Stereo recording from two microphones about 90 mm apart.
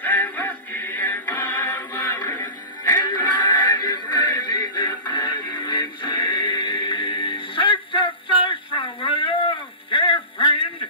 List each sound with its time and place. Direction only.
0.0 s music: 20° left (ahead or behind)
2.9 s music: 55° left (ahead or behind)
3.3 s synthetic singing: 60° left (ahead or behind)
3.8 s music: 55° left (ahead or behind)